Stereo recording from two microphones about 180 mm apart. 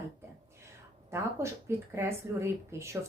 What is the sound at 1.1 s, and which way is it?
A woman's voice, 15° right (ahead or behind).